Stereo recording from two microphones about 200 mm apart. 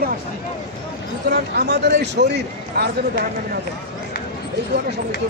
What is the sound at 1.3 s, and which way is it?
A man's voice, 60° right (ahead or behind).